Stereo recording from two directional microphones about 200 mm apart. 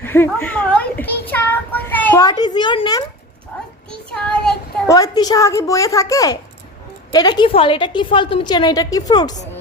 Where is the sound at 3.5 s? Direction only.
10° left (ahead or behind).